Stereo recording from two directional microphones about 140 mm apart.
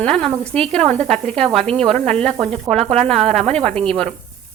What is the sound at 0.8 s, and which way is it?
Speech, 55° right (ahead or behind).